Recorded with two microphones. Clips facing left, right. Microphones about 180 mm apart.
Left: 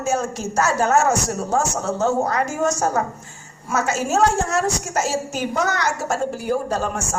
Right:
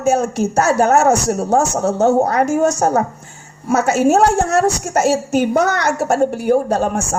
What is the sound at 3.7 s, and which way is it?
A woman's voice, 60° right (ahead or behind).